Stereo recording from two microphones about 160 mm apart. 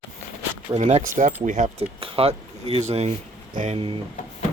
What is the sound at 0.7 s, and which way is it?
Speech, 40° right (ahead or behind).